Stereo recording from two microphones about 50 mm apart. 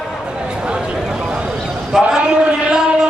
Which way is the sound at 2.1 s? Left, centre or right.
Centre.